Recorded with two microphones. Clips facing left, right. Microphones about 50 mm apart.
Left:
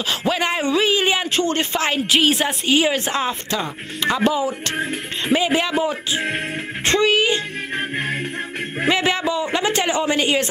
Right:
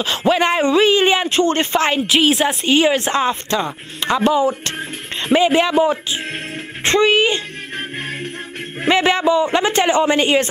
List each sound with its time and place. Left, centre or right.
0.0 s speech: centre
7.7 s music: centre
8.8 s speech: centre
10.1 s a man's voice: centre